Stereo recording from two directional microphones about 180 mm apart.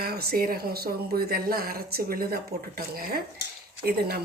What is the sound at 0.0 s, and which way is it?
Speech, 60° right (ahead or behind).